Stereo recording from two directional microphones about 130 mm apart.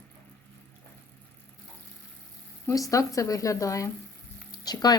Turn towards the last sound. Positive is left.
turn(degrees=30)  # may be behind; listen again after turning